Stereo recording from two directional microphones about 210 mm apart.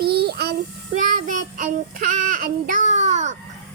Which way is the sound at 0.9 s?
35° right (ahead or behind).